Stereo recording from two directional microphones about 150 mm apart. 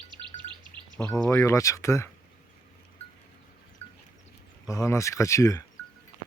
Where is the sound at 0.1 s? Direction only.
30° right (ahead or behind).